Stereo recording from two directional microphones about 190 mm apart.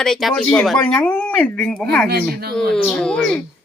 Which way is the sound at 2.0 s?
55° right (ahead or behind).